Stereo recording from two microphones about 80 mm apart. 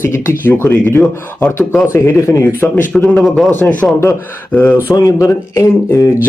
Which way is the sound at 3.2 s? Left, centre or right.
Centre.